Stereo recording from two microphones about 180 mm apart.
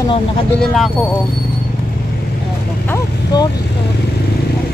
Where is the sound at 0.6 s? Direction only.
5° left (ahead or behind).